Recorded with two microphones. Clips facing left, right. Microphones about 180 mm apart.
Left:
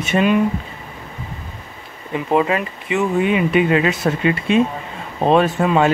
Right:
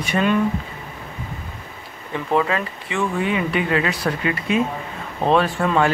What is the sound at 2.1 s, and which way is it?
Speech, 20° left (ahead or behind).